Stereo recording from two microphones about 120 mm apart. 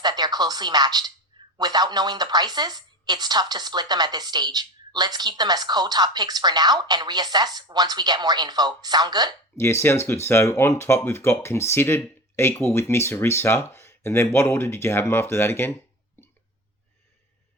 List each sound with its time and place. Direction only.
0.0 s speech: 35° right (ahead or behind)
9.6 s speech: 20° left (ahead or behind)